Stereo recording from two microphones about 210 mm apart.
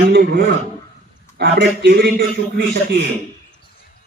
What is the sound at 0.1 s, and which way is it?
Speech, 45° right (ahead or behind).